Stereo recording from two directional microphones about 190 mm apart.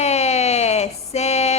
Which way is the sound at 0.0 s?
35° left (ahead or behind).